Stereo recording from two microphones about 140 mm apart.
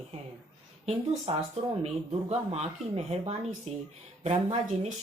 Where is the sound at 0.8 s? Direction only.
50° right (ahead or behind).